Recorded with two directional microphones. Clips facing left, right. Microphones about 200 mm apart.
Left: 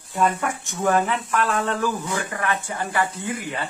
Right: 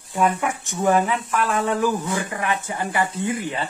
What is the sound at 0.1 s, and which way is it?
Speech, 10° right (ahead or behind).